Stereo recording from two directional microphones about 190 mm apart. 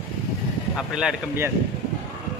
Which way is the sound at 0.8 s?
5° right (ahead or behind).